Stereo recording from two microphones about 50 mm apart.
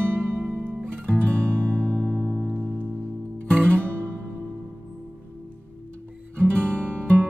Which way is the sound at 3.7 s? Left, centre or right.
Right.